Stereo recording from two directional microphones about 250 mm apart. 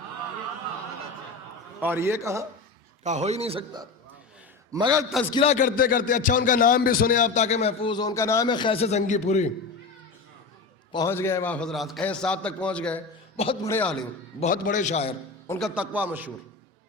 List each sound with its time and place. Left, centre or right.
1.8 s a man's voice: centre
3.0 s a man's voice: right
5.3 s speech: left
10.9 s a man's voice: centre
13.3 s a man's voice: left
13.7 s a man's voice: centre
14.3 s speech: left
15.4 s a man's voice: centre